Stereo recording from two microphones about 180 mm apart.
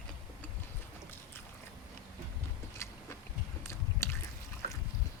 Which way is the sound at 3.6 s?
15° left (ahead or behind).